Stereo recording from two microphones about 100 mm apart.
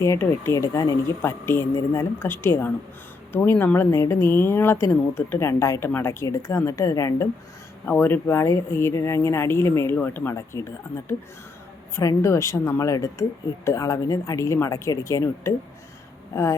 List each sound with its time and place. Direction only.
0.0 s speech: 25° left (ahead or behind)
7.9 s speech: 20° left (ahead or behind)